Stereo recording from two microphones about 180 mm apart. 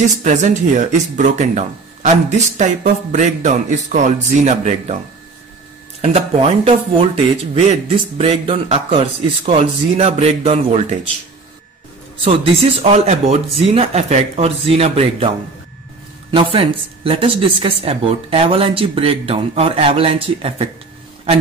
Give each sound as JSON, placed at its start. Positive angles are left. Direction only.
{"t": 0.2, "sound": "speech", "side_deg": -45}
{"t": 5.9, "sound": "a woman's voice", "side_deg": -35}
{"t": 12.8, "sound": "a woman's voice", "side_deg": -35}